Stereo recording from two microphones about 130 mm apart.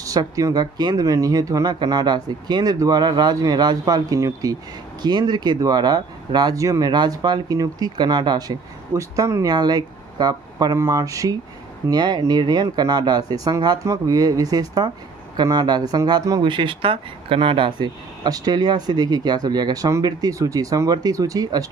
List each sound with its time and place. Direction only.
0.0 s speech: 25° right (ahead or behind)